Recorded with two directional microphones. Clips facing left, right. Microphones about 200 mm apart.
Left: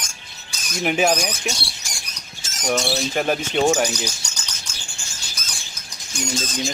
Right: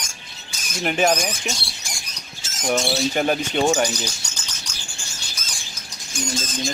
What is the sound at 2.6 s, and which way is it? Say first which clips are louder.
Speech: right 1 dB; centre (ahead or behind).